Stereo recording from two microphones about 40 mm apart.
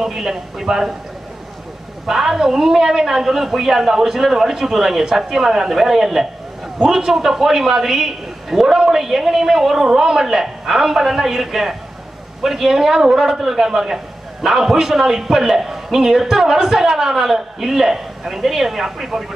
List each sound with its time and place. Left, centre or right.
0.0 s a man's voice: centre
2.0 s a man's voice: centre
7.1 s a man's voice: centre